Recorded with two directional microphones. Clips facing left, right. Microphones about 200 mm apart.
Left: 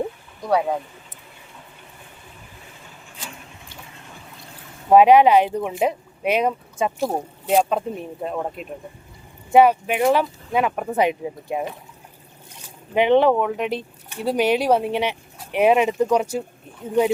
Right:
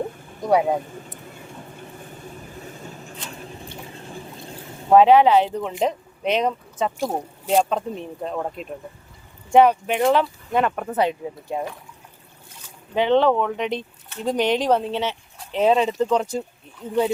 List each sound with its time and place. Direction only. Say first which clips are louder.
0.4 s speech: right 2 dB; 20° right (ahead or behind)
2.6 s vehicle: right 8 dB; 40° right (ahead or behind)
3.4 s a sound: right 7 dB; 35° right (ahead or behind)
4.9 s speech: left 1 dB; 15° left (ahead or behind)
12.9 s speech: left 2 dB; 15° left (ahead or behind)